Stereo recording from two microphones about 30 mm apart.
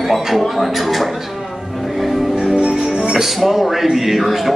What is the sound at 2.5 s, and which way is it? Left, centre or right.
Music, right.